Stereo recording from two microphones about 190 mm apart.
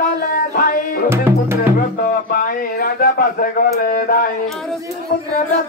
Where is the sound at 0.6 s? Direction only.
50° left (ahead or behind).